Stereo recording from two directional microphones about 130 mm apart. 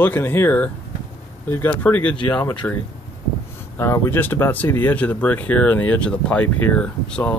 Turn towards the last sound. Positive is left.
turn(degrees=10)  # may be behind; listen again after turning